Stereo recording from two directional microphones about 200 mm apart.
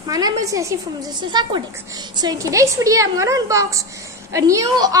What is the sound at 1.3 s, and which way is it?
A woman's voice, 20° right (ahead or behind).